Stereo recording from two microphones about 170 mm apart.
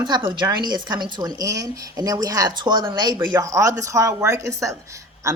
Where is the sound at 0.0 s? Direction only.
25° right (ahead or behind).